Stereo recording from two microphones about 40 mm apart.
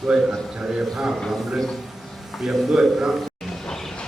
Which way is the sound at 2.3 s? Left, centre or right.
Centre.